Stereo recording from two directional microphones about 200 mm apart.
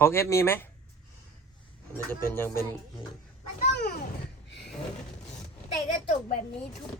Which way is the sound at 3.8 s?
50° left (ahead or behind).